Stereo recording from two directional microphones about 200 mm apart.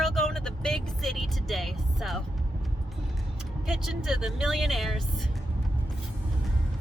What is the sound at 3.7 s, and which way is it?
Speech, centre (ahead or behind).